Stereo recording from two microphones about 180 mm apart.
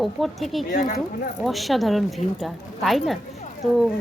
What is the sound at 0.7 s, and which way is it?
Speech, 50° left (ahead or behind).